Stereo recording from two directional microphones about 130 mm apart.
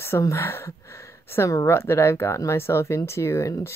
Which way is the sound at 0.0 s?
20° left (ahead or behind).